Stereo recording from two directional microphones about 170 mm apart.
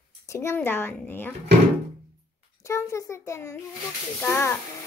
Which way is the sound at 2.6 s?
15° left (ahead or behind).